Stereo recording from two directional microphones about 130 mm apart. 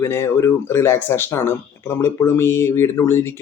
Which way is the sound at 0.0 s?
20° left (ahead or behind).